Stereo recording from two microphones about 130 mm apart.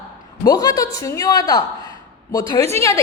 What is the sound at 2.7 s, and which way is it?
Speech, 25° left (ahead or behind).